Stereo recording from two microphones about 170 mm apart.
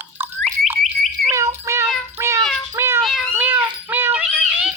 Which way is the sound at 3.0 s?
Centre (ahead or behind).